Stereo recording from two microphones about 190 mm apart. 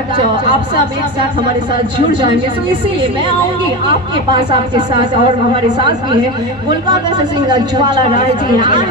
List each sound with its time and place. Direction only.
2.0 s speech: 25° right (ahead or behind)
3.8 s speech: 25° right (ahead or behind)